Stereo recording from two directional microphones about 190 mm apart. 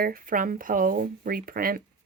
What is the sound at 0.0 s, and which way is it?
Speech, 50° right (ahead or behind).